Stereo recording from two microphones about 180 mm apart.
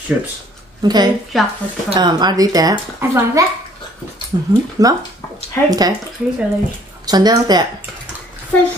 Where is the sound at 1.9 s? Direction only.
25° right (ahead or behind).